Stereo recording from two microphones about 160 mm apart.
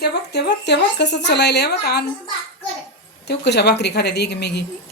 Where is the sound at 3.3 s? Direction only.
90° left.